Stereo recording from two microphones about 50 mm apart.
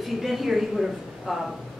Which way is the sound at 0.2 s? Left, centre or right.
Centre.